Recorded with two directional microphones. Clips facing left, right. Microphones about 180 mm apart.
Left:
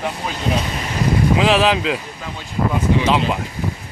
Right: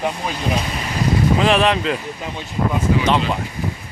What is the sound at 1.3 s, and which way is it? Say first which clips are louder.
Speech: left 1 dB; centre (ahead or behind).